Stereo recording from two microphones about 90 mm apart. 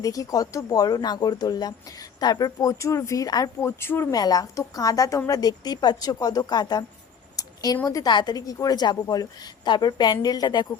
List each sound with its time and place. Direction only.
0.0 s a woman's voice: 40° left (ahead or behind)
3.6 s speech: 25° left (ahead or behind)
4.1 s a woman's voice: 45° left (ahead or behind)
7.3 s a sound: 45° left (ahead or behind)
7.9 s speech: 40° left (ahead or behind)
8.1 s a woman's voice: 50° left (ahead or behind)